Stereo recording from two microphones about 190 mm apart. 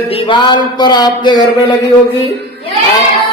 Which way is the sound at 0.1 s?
25° left (ahead or behind).